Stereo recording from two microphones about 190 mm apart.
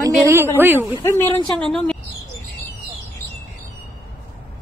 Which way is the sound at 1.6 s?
5° left (ahead or behind).